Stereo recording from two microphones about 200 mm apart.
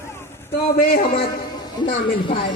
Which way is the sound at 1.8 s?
25° left (ahead or behind).